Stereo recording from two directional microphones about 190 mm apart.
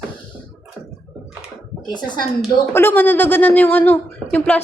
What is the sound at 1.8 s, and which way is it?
Speech, 25° left (ahead or behind).